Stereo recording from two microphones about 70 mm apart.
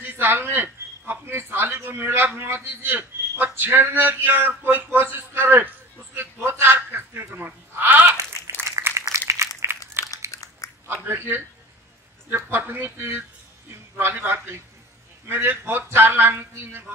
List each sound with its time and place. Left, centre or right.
0.0 s speech: right
6.1 s sheep: right
8.6 s a sound: right
9.3 s crumpling: right
10.0 s biting: right
10.3 s biting: left
10.9 s speech: right
12.4 s a man's voice: right